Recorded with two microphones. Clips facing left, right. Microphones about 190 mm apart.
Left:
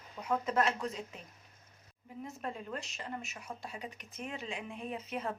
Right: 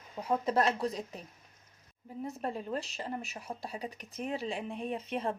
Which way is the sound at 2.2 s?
35° right (ahead or behind).